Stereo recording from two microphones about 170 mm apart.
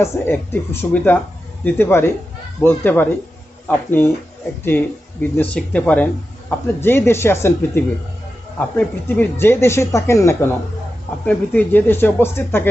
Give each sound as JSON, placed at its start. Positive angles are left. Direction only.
{"t": 0.0, "sound": "speech", "side_deg": 15}